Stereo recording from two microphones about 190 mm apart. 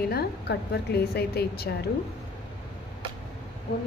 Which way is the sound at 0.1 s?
55° left (ahead or behind).